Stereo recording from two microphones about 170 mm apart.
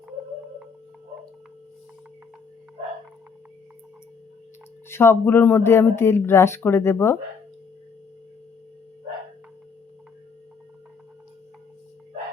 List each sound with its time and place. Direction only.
4.9 s speech: 15° left (ahead or behind)